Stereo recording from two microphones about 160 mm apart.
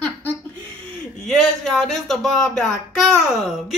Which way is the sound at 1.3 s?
Centre (ahead or behind).